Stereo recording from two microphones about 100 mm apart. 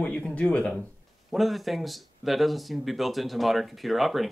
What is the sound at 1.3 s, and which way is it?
Speech, centre (ahead or behind).